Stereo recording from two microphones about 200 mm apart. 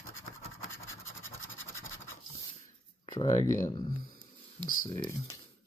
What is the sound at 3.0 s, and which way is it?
Speech, 20° left (ahead or behind).